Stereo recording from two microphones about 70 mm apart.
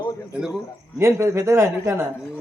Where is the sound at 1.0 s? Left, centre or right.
Right.